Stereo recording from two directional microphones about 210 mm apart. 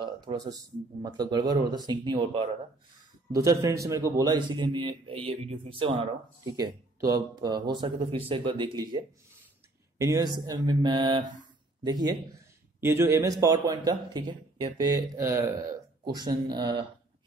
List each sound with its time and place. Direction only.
0.0 s a man's voice: 20° right (ahead or behind)
6.4 s a man's voice: 15° right (ahead or behind)